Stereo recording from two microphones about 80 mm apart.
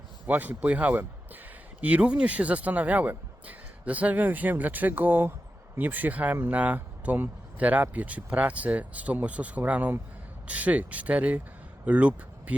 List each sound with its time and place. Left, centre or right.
0.3 s speech: right